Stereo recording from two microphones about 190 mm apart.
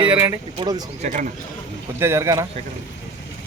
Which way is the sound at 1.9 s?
15° right (ahead or behind).